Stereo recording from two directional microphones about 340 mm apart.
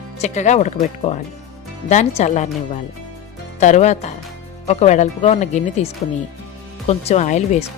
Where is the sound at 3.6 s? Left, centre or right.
Left.